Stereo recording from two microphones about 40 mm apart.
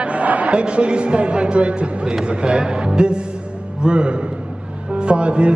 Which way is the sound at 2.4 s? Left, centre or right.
Right.